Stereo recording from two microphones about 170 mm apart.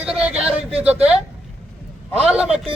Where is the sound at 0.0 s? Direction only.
5° right (ahead or behind).